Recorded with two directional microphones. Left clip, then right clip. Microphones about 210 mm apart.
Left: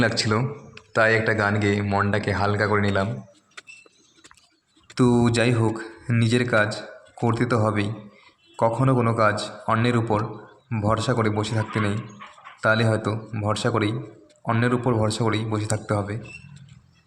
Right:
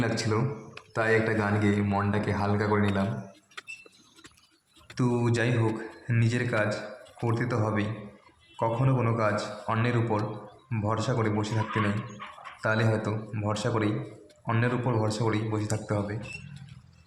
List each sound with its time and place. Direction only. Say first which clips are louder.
0.0 s a man's voice: left 6 dB; 25° left (ahead or behind)
3.6 s a sound: even; 5° left (ahead or behind)
4.9 s a man's voice: left 7 dB; 25° left (ahead or behind)